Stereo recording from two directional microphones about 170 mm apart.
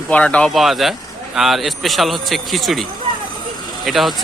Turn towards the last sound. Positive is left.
turn(degrees=0)  # may be behind; listen again after turning